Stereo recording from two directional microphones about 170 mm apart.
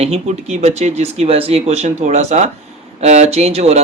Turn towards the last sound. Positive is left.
turn(degrees=-40)  # may be behind; listen again after turning